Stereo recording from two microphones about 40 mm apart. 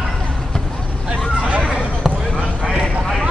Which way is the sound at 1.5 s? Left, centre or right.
Right.